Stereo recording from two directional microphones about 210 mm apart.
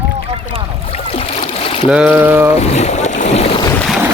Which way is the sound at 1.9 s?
5° right (ahead or behind).